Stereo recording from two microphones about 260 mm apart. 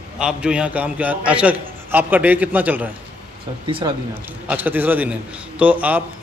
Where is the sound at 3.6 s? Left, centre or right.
Centre.